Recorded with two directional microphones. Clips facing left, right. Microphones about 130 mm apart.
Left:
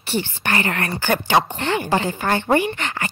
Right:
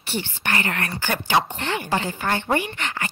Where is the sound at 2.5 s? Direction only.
35° left (ahead or behind).